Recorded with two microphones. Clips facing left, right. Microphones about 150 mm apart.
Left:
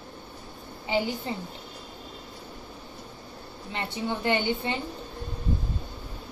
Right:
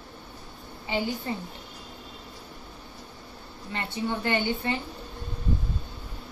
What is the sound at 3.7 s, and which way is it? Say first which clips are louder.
A woman's voice: right 1 dB; 20° left (ahead or behind).